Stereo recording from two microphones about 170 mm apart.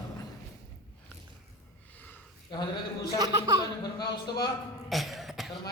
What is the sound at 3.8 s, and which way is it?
Speech, 25° left (ahead or behind).